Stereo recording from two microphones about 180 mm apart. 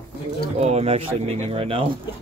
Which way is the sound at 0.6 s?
35° right (ahead or behind).